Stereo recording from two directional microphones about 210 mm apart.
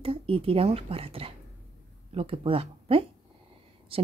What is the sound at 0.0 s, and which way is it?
Speech, 25° right (ahead or behind).